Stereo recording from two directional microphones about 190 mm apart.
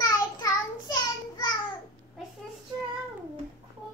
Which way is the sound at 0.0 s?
20° left (ahead or behind).